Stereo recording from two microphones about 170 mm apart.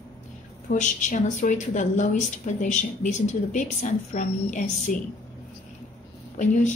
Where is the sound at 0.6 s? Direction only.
50° left (ahead or behind).